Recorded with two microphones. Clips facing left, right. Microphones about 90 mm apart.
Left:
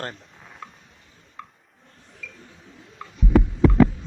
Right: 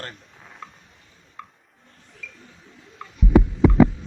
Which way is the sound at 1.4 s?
Centre (ahead or behind).